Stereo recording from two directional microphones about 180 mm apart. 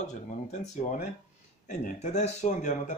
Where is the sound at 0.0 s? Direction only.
40° left (ahead or behind).